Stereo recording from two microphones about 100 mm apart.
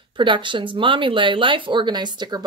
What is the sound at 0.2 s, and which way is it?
Speech, 55° right (ahead or behind).